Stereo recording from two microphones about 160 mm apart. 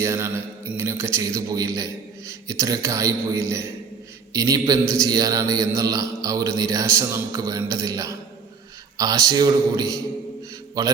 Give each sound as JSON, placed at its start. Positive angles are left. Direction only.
{"t": 0.0, "sound": "mantra", "side_deg": -15}